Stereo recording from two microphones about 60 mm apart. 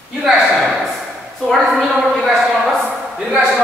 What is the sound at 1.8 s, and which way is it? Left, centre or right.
Speech, centre.